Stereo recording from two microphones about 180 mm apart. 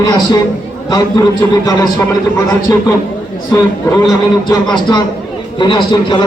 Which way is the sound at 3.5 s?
15° left (ahead or behind).